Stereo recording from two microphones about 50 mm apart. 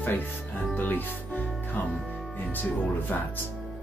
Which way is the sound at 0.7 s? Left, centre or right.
Left.